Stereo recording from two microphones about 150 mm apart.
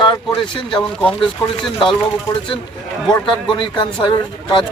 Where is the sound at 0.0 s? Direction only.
30° left (ahead or behind).